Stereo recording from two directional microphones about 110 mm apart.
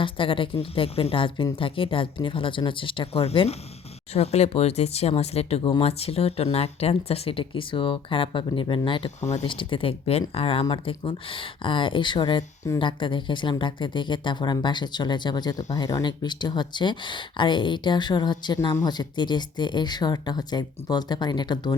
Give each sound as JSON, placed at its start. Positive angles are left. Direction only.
{"t": 0.0, "sound": "speech", "side_deg": 50}
{"t": 9.2, "sound": "speech", "side_deg": 90}
{"t": 9.5, "sound": "speech", "side_deg": 50}
{"t": 12.8, "sound": "speech", "side_deg": 45}